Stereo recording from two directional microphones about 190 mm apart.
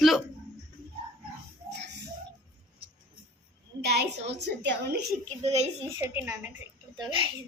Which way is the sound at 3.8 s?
60° right (ahead or behind).